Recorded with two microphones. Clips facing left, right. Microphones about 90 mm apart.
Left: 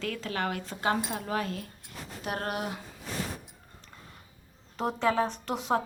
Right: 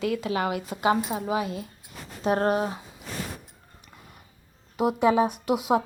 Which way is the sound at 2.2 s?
30° right (ahead or behind).